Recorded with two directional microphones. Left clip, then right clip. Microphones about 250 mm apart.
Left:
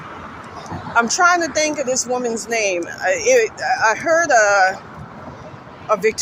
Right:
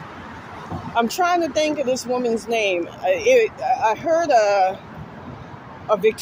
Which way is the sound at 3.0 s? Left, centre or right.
Centre.